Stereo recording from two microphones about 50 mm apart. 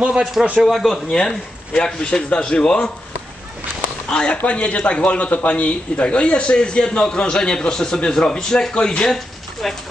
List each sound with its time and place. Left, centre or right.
0.2 s speech: centre
1.1 s speech: centre
4.1 s speech: centre